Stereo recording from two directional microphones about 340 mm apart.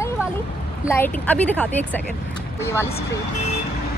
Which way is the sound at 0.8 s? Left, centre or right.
Centre.